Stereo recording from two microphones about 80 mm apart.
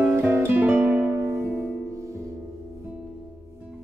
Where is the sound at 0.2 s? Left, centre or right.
Right.